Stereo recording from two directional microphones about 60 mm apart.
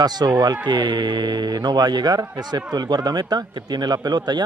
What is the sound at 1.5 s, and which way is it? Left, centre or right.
Speech, right.